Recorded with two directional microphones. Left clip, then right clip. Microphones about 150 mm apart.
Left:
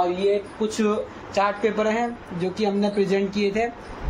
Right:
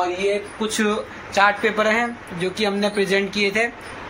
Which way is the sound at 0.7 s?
Centre (ahead or behind).